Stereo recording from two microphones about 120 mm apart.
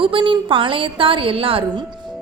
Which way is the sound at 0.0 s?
45° right (ahead or behind).